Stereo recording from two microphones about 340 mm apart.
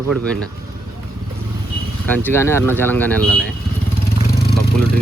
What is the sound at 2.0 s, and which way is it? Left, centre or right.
Speech, centre.